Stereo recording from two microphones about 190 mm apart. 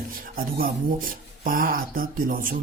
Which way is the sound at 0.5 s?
50° right (ahead or behind).